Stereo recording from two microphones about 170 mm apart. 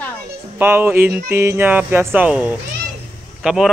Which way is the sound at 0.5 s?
10° right (ahead or behind).